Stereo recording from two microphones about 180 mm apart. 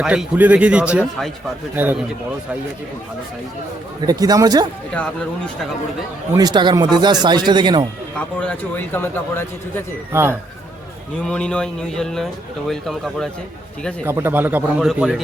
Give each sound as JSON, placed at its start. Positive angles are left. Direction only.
{"t": 0.0, "sound": "speech", "side_deg": -5}
{"t": 4.0, "sound": "speech", "side_deg": -20}
{"t": 4.9, "sound": "speech", "side_deg": 5}
{"t": 6.3, "sound": "speech", "side_deg": -25}
{"t": 8.4, "sound": "speech", "side_deg": 10}
{"t": 10.1, "sound": "speech", "side_deg": -15}
{"t": 11.2, "sound": "speech", "side_deg": 5}
{"t": 14.0, "sound": "speech", "side_deg": -15}